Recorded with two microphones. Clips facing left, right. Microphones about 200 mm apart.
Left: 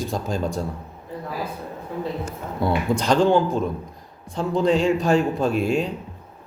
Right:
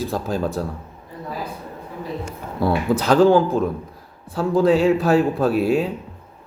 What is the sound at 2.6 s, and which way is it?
Speech, 5° right (ahead or behind).